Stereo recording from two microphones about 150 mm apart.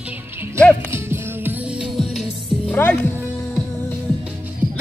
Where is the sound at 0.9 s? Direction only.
15° right (ahead or behind).